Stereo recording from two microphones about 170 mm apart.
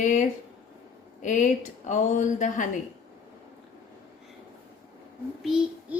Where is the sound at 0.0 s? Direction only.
50° left (ahead or behind).